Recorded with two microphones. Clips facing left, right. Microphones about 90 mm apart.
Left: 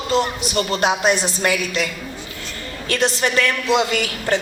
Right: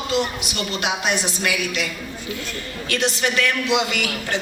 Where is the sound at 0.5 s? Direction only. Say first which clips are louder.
Left 7 dB; 35° left (ahead or behind).